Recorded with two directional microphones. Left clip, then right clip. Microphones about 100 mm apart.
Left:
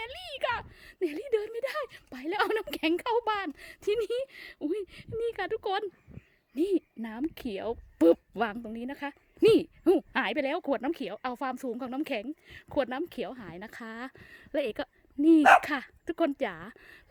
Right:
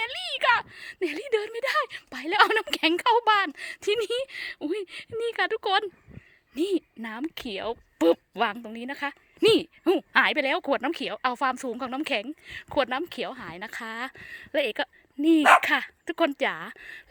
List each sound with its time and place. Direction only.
0.0 s speech: 30° left (ahead or behind)
6.5 s a woman's voice: 35° left (ahead or behind); by 8.2 s 90° left
8.4 s speech: 65° left (ahead or behind)
8.7 s a woman's voice: 40° left (ahead or behind)
9.4 s speech: 65° left (ahead or behind)
10.1 s a woman's voice: 45° left (ahead or behind)